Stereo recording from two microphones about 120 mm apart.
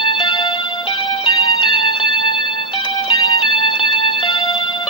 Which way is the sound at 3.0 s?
45° left (ahead or behind).